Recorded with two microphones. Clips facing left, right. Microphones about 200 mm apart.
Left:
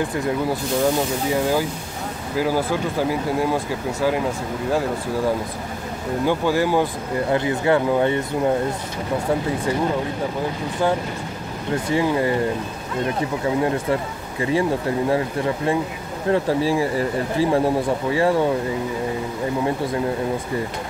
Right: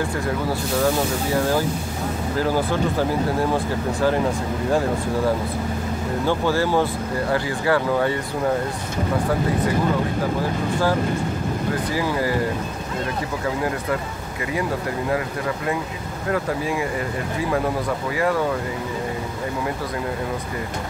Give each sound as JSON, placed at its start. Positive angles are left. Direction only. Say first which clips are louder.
{"t": 1.3, "sound": "speech", "louder": "even", "side_deg": 15}
{"t": 6.2, "sound": "speech", "louder": "left 2 dB", "side_deg": 15}
{"t": 11.9, "sound": "speech", "louder": "left 6 dB", "side_deg": 25}
{"t": 13.6, "sound": "speech", "louder": "left 5 dB", "side_deg": 25}
{"t": 15.0, "sound": "speech", "louder": "left 2 dB", "side_deg": 30}